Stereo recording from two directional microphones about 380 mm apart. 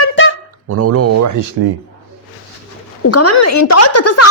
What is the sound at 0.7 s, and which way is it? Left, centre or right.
Speech, right.